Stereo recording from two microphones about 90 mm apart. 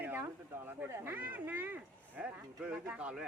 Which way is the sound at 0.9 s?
25° right (ahead or behind).